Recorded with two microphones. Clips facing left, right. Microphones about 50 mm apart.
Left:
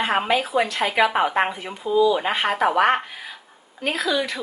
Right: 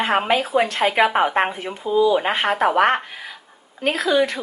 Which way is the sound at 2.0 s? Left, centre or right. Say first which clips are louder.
Right 2 dB; right.